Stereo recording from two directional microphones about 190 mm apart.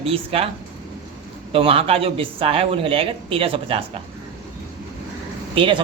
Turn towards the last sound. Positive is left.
turn(degrees=-25)  # may be behind; listen again after turning